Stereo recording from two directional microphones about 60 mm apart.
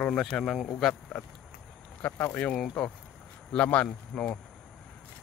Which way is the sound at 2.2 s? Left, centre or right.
Left.